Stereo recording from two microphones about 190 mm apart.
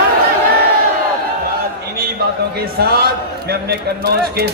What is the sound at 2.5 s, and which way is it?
Speech, 55° right (ahead or behind).